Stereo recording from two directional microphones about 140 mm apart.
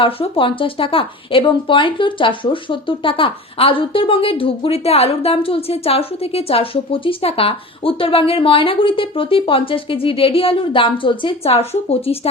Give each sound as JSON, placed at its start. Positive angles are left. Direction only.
{"t": 0.0, "sound": "speech", "side_deg": 40}